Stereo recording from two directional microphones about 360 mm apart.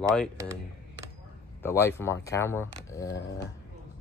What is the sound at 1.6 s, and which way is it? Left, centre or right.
Speech, centre.